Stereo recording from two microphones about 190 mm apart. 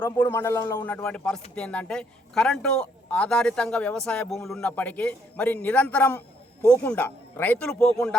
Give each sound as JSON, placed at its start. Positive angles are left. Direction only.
{"t": 0.0, "sound": "a man's voice", "side_deg": 10}